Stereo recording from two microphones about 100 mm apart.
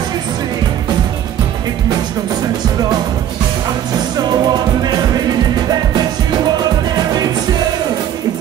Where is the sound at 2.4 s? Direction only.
40° right (ahead or behind).